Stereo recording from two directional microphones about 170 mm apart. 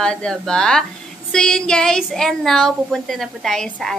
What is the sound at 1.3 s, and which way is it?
Speech, 5° left (ahead or behind).